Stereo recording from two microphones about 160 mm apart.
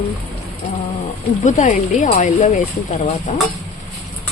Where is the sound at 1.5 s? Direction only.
50° left (ahead or behind).